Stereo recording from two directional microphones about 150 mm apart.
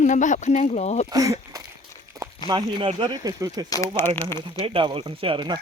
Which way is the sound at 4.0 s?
15° left (ahead or behind).